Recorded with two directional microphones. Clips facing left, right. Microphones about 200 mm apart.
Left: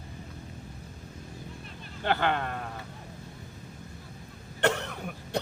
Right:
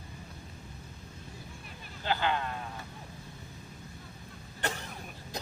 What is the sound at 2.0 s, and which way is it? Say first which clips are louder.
Speech: left 3 dB; 60° left (ahead or behind).